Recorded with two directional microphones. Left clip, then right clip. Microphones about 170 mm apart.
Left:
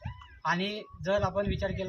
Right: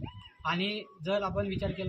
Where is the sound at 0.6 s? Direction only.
50° left (ahead or behind).